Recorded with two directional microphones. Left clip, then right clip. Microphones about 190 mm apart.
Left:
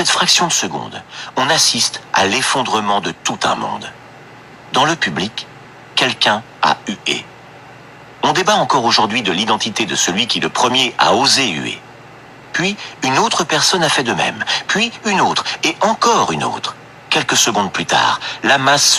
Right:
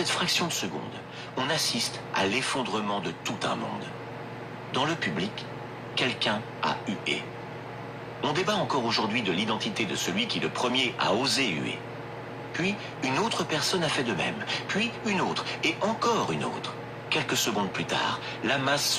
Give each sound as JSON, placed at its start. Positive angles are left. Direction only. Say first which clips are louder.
{"t": 0.1, "sound": "a man's voice", "louder": "left 14 dB", "side_deg": 35}
{"t": 8.2, "sound": "speech", "louder": "left 14 dB", "side_deg": 40}